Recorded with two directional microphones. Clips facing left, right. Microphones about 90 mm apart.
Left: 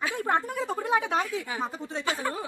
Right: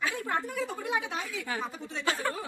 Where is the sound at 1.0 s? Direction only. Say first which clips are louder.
Left 8 dB; 50° left (ahead or behind).